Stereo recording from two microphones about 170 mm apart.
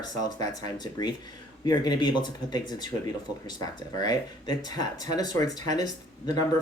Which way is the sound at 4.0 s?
25° left (ahead or behind).